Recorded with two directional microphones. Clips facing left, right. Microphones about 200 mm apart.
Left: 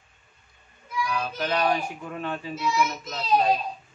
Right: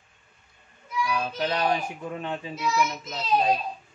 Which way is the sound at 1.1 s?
20° right (ahead or behind).